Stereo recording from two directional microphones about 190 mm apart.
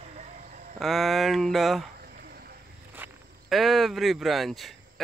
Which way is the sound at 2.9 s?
5° right (ahead or behind).